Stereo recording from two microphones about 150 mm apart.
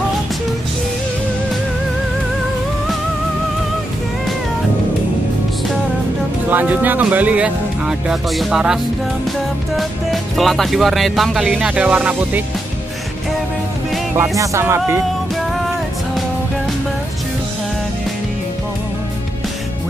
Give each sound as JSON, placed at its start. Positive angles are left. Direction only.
{"t": 6.5, "sound": "speech", "side_deg": -10}
{"t": 9.8, "sound": "speech", "side_deg": 0}
{"t": 14.1, "sound": "speech", "side_deg": -20}